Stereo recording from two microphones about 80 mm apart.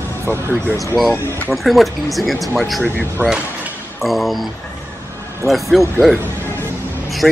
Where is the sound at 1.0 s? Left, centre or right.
Centre.